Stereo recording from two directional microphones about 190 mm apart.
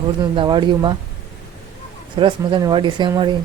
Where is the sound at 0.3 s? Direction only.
25° right (ahead or behind).